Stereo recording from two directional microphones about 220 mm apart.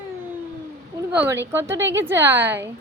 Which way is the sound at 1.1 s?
10° right (ahead or behind).